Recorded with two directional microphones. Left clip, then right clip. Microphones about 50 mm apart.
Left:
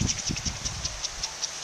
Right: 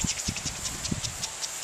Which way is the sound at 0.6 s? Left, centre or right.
Right.